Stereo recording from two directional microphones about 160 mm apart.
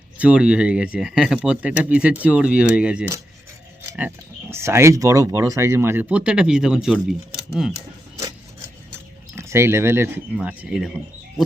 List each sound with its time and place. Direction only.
0.2 s speech: 5° right (ahead or behind)
9.3 s speech: 15° right (ahead or behind)